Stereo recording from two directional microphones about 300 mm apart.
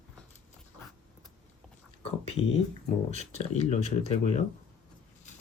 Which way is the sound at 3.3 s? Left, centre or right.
Left.